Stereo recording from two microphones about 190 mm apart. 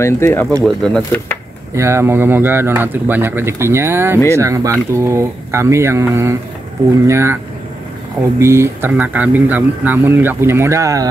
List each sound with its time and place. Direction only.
0.0 s speech: 15° left (ahead or behind)
1.8 s speech: 15° right (ahead or behind)
8.4 s speech: 15° right (ahead or behind)